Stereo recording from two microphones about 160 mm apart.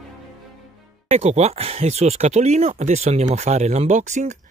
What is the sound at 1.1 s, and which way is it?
Speech, 40° right (ahead or behind).